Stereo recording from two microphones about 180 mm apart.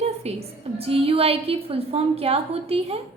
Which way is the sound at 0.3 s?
35° right (ahead or behind).